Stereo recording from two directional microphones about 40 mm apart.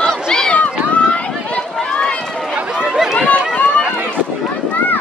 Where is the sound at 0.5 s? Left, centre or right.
Left.